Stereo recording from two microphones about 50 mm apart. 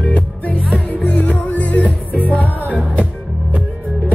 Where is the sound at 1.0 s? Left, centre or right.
Left.